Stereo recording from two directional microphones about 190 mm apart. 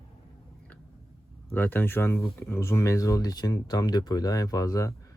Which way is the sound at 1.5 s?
10° left (ahead or behind).